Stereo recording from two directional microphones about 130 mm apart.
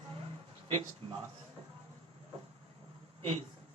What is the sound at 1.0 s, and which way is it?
Speech, 45° right (ahead or behind).